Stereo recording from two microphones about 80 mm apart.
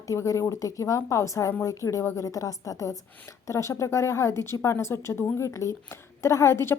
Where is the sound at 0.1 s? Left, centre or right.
Left.